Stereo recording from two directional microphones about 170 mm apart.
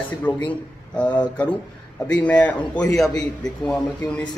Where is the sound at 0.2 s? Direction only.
10° left (ahead or behind).